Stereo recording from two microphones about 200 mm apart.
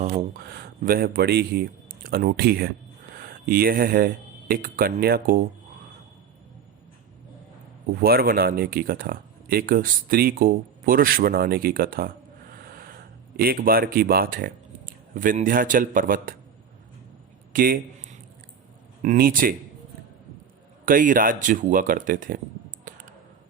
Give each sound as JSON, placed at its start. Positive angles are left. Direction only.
{"t": 0.3, "sound": "speech", "side_deg": -55}
{"t": 8.0, "sound": "speech", "side_deg": -50}
{"t": 17.5, "sound": "a sound", "side_deg": -45}
{"t": 19.0, "sound": "speech", "side_deg": -45}
{"t": 20.8, "sound": "speech", "side_deg": -45}
{"t": 22.8, "sound": "a sound", "side_deg": -40}